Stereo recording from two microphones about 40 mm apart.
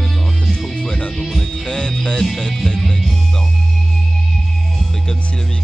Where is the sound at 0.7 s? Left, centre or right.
Centre.